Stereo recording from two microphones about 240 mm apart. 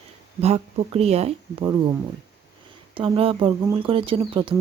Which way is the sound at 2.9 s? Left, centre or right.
Right.